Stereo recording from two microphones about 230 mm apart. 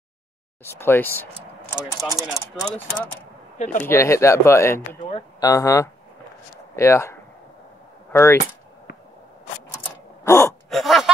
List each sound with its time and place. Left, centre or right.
0.7 s speech: centre
3.5 s speech: left
3.8 s speech: centre
10.2 s gasp: centre
10.7 s a sound: centre